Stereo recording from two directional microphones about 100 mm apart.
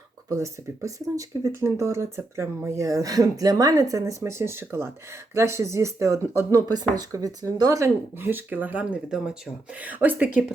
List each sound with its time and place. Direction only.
0.3 s speech: 30° right (ahead or behind)
8.2 s speech: 20° right (ahead or behind)